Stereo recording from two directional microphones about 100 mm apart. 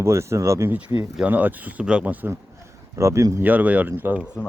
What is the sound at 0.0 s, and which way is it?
Speech, 30° right (ahead or behind).